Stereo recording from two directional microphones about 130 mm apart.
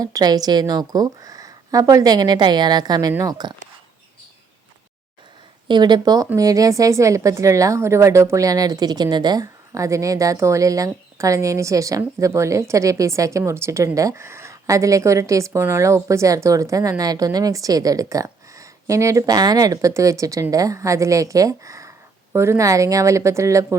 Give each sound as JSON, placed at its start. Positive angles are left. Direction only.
{"t": 0.0, "sound": "a woman's voice", "side_deg": -30}
{"t": 5.6, "sound": "a woman's voice", "side_deg": -35}